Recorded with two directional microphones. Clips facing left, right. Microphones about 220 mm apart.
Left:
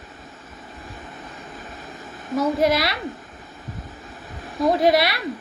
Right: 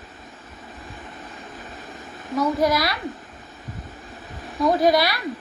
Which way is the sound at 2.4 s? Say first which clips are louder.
Left 1 dB; 25° left (ahead or behind).